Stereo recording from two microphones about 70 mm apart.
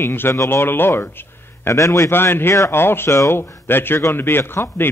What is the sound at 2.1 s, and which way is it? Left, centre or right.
A man's voice, left.